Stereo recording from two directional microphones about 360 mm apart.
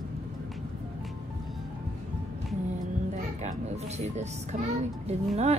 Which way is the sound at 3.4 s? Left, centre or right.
Centre.